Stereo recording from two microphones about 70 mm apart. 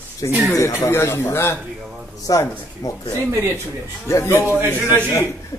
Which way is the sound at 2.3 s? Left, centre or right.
Left.